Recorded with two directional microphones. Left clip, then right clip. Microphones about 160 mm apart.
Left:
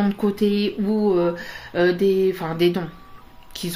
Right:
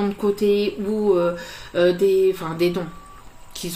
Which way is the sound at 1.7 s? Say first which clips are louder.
Right 1 dB; 50° left (ahead or behind).